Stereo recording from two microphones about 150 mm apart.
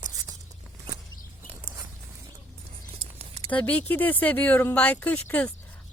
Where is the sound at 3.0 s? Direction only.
40° right (ahead or behind).